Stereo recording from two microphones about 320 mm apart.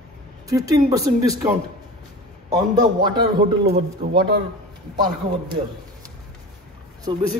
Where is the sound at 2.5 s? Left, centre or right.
Centre.